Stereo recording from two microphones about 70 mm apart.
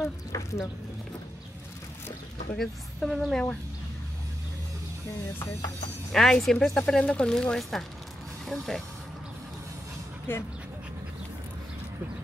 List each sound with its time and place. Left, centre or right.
0.3 s speech: left
2.5 s speech: centre
6.1 s speech: centre
10.3 s speech: left